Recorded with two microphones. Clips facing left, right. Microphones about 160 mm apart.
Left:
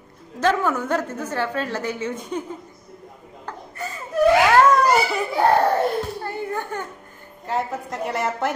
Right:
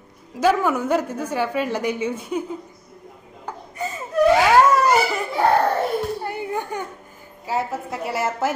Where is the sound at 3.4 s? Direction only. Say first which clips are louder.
Right 3 dB; 15° right (ahead or behind).